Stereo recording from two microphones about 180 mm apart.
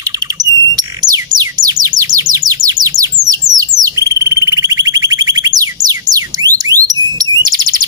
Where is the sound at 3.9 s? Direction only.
20° right (ahead or behind).